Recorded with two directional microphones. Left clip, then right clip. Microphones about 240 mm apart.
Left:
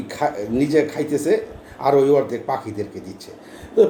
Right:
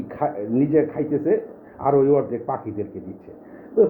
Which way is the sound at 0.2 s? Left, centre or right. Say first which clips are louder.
Left 1 dB; centre.